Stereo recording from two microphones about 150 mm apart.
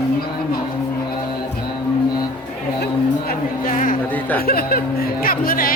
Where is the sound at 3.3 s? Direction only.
65° left (ahead or behind).